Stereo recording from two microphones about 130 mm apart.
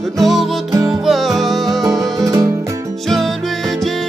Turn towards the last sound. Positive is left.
turn(degrees=0)  # may be behind; listen again after turning